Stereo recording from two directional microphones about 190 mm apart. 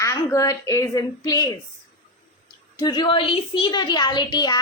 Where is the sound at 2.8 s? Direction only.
25° left (ahead or behind).